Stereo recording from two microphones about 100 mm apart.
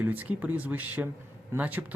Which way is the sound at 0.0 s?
15° right (ahead or behind).